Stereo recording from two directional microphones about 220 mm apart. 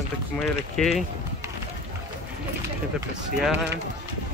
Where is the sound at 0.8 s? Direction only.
Centre (ahead or behind).